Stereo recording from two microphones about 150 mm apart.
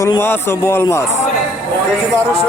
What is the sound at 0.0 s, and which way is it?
Speech, 15° left (ahead or behind).